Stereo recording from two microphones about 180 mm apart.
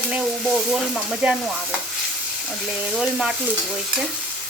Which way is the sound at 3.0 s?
5° right (ahead or behind).